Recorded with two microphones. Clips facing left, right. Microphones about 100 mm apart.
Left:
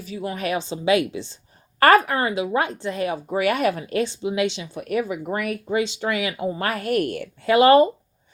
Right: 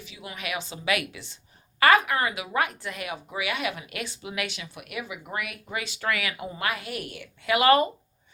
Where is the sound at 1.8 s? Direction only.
45° left (ahead or behind).